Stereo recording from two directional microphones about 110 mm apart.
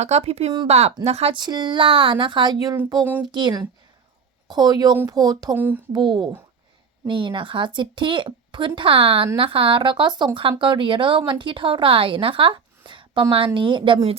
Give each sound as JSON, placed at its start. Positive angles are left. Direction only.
{"t": 0.0, "sound": "speech", "side_deg": -75}
{"t": 1.3, "sound": "speech", "side_deg": -40}
{"t": 5.5, "sound": "speech", "side_deg": -15}
{"t": 5.9, "sound": "speech", "side_deg": -45}